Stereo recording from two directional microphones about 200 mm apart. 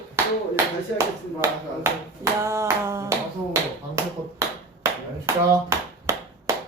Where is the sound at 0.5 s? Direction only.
15° right (ahead or behind).